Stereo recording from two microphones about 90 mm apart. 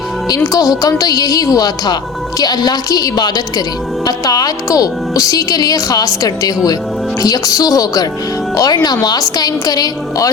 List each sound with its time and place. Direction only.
0.3 s a woman's voice: 40° left (ahead or behind)